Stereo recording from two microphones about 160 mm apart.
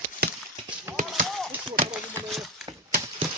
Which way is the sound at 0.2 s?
75° right (ahead or behind).